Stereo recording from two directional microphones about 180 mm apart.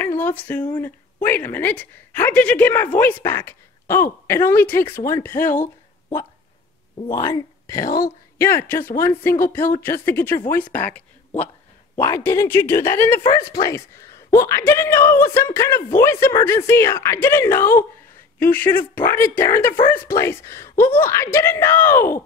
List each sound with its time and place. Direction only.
0.0 s speech: 10° left (ahead or behind)
5.4 s speech: 45° left (ahead or behind)
7.1 s speech: 20° left (ahead or behind)